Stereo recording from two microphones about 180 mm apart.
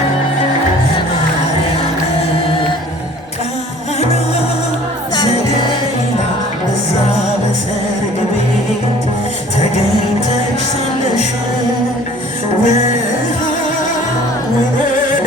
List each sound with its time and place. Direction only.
12.6 s music: 40° left (ahead or behind)